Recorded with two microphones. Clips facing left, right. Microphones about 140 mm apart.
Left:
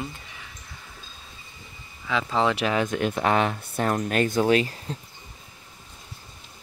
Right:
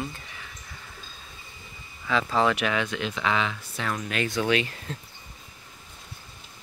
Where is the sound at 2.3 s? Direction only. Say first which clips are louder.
Left 2 dB; 25° left (ahead or behind).